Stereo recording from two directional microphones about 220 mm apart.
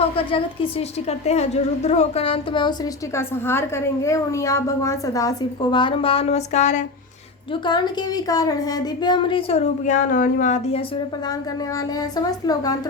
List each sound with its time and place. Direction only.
0.3 s a woman's voice: 25° left (ahead or behind)
3.2 s a woman's voice: 10° left (ahead or behind); by 6.8 s 30° left (ahead or behind)
7.5 s a woman's voice: 20° left (ahead or behind)
11.9 s a woman's voice: 15° left (ahead or behind)